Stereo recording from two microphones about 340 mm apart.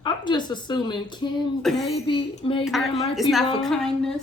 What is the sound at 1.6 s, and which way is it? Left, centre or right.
Speech, centre.